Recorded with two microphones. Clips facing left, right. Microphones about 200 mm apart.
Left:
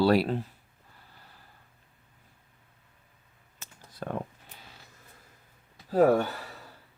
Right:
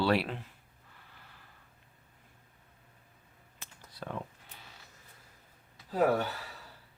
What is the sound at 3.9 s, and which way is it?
Speech, 50° left (ahead or behind).